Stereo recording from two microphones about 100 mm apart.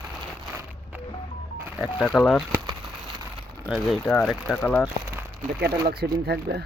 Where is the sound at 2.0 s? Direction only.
Centre (ahead or behind).